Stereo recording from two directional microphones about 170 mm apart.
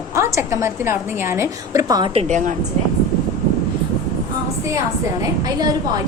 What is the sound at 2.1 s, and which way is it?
Speech, 45° right (ahead or behind).